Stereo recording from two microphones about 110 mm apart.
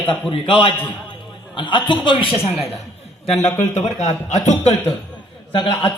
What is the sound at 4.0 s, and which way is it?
Speech, 90° left.